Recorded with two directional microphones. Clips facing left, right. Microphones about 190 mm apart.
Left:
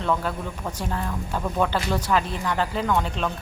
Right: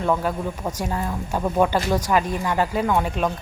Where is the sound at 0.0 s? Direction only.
10° right (ahead or behind).